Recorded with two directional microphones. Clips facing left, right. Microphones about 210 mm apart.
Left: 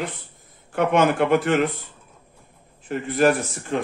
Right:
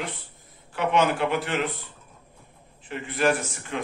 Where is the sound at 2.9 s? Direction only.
40° left (ahead or behind).